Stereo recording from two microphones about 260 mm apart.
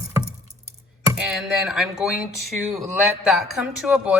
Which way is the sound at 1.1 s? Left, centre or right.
Centre.